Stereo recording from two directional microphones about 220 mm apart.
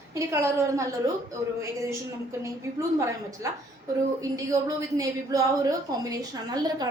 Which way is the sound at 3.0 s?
15° right (ahead or behind).